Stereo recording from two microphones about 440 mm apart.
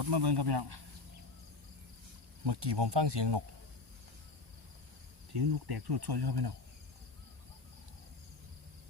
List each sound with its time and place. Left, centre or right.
0.0 s cricket: right
2.4 s cricket: right
5.3 s cricket: right